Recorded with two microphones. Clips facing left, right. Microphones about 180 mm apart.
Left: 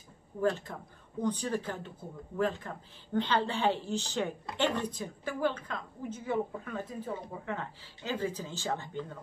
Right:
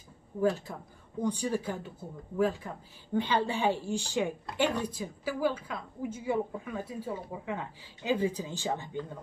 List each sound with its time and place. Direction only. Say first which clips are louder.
0.4 s a woman's voice: right 2 dB; 10° right (ahead or behind)
4.5 s a woman's voice: right 1 dB; centre (ahead or behind)